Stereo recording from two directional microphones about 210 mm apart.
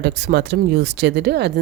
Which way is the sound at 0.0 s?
50° right (ahead or behind).